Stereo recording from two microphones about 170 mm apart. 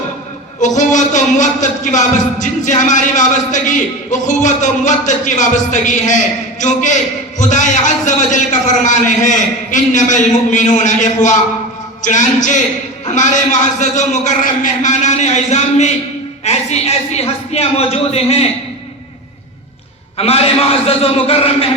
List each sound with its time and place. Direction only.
0.6 s speech: 45° left (ahead or behind)
20.1 s speech: 35° left (ahead or behind)